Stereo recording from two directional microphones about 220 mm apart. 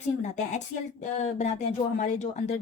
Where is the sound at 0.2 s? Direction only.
30° left (ahead or behind).